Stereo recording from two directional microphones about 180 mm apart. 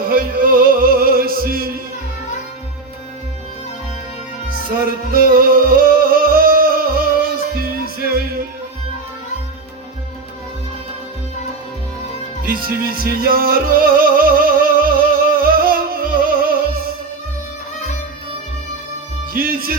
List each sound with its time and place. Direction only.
0.0 s music: 55° right (ahead or behind)
4.7 s music: 55° right (ahead or behind)
12.4 s music: 55° right (ahead or behind)
19.3 s music: 55° right (ahead or behind)